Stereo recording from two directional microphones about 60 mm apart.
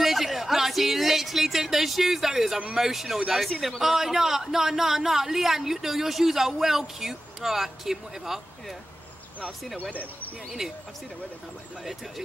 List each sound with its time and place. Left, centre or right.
0.0 s speech: centre
9.8 s speech: left
10.6 s speech: centre